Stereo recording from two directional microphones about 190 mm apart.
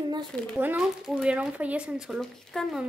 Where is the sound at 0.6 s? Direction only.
5° right (ahead or behind).